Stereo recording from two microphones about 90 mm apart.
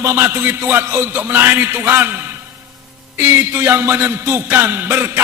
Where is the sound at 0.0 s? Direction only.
30° right (ahead or behind).